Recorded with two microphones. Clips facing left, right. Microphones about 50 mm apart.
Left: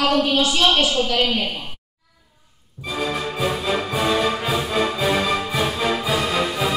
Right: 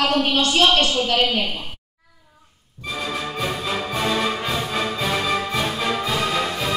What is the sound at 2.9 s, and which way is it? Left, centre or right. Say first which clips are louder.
Music: left 2 dB; centre.